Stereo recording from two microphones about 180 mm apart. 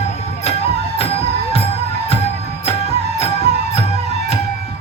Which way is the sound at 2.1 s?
35° left (ahead or behind).